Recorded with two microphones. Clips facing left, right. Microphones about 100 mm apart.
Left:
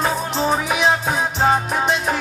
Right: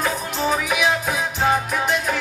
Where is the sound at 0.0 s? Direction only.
30° left (ahead or behind).